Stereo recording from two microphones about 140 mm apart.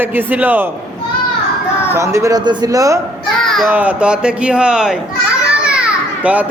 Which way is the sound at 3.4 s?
Centre (ahead or behind).